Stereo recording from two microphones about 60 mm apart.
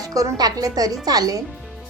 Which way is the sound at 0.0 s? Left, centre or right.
Right.